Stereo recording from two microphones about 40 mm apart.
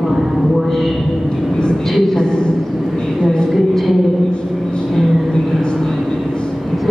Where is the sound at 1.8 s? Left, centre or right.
Centre.